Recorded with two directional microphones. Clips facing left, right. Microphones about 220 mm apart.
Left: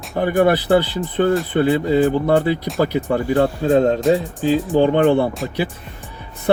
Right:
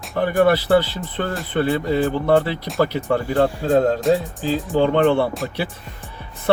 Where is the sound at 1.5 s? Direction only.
15° left (ahead or behind).